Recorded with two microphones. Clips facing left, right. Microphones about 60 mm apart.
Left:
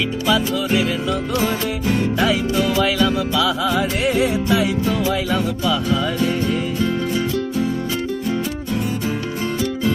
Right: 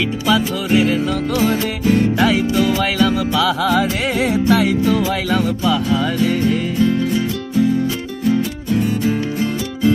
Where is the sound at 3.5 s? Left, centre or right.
Right.